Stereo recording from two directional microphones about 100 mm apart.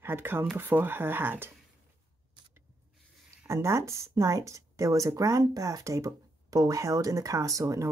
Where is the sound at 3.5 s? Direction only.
30° right (ahead or behind).